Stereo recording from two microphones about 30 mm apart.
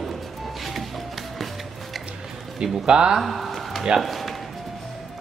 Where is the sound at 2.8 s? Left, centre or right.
Right.